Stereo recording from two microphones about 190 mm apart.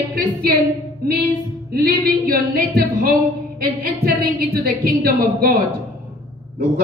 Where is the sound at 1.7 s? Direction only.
55° right (ahead or behind).